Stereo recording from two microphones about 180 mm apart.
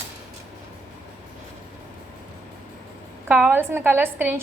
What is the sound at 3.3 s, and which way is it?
A woman's voice, 10° right (ahead or behind).